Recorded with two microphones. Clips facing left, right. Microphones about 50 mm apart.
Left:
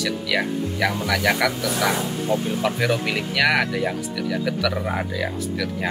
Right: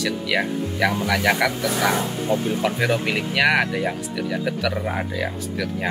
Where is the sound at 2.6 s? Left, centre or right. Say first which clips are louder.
Even; centre.